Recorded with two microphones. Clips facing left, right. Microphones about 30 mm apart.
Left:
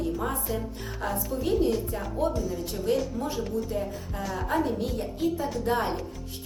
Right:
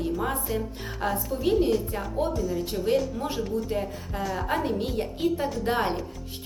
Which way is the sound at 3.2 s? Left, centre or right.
Right.